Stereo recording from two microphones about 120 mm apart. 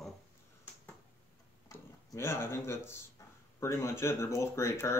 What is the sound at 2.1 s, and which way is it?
Speech, 20° left (ahead or behind).